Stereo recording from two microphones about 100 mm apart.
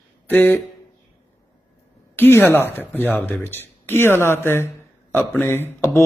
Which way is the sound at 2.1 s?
20° left (ahead or behind).